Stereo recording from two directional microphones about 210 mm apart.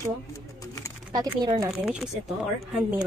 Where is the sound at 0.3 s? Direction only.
15° left (ahead or behind).